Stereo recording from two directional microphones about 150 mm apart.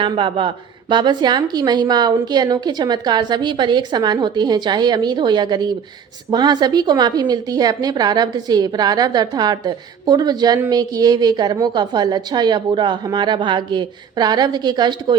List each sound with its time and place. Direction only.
0.0 s a woman's voice: 35° right (ahead or behind)